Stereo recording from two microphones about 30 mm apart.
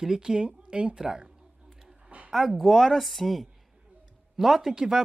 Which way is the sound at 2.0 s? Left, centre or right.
Right.